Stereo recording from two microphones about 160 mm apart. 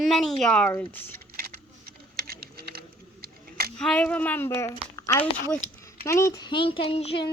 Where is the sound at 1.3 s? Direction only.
70° right (ahead or behind).